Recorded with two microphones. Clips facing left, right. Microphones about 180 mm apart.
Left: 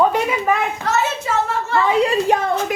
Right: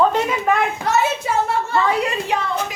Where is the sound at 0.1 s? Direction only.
5° left (ahead or behind).